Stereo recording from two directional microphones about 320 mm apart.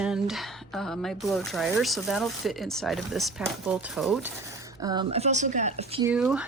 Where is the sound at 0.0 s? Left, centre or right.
Centre.